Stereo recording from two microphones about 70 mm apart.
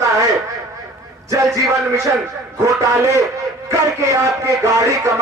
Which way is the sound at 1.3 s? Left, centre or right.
Right.